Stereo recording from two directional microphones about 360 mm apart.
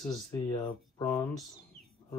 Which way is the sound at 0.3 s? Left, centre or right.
Centre.